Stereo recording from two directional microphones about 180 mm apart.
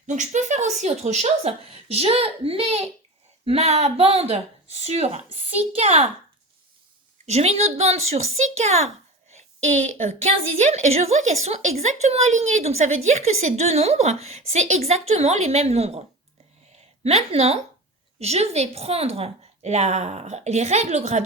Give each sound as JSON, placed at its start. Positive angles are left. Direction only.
{"t": 0.1, "sound": "a woman's voice", "side_deg": -40}
{"t": 7.3, "sound": "a woman's voice", "side_deg": -35}